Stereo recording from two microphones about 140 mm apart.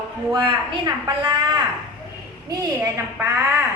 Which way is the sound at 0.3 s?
35° right (ahead or behind).